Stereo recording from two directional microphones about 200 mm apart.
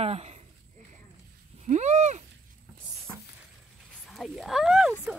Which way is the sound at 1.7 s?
35° right (ahead or behind).